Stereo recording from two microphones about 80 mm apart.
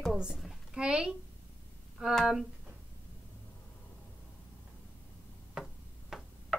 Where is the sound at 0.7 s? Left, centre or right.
Centre.